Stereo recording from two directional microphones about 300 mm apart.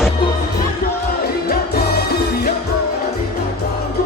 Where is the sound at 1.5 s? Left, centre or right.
Left.